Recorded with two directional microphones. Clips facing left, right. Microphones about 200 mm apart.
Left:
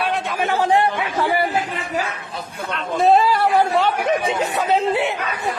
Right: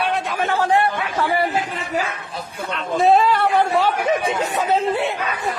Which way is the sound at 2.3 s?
Centre (ahead or behind).